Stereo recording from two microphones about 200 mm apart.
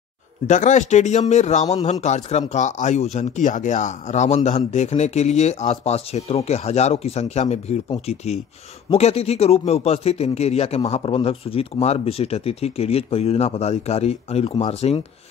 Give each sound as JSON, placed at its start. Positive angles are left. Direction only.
{"t": 0.5, "sound": "speech", "side_deg": 40}